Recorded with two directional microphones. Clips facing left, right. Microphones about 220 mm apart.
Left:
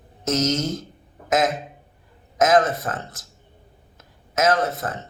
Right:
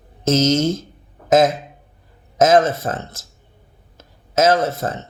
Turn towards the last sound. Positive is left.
turn(degrees=-25)  # may be behind; listen again after turning